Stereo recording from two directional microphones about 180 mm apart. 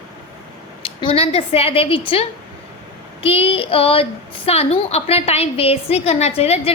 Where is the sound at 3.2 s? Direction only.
30° left (ahead or behind).